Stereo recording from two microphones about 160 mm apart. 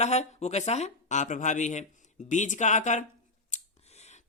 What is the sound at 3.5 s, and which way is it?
Scissors, 45° left (ahead or behind).